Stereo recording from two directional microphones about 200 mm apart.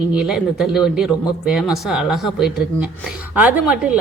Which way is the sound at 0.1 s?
5° right (ahead or behind).